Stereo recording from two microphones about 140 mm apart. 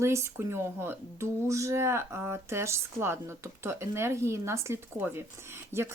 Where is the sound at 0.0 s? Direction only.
20° right (ahead or behind).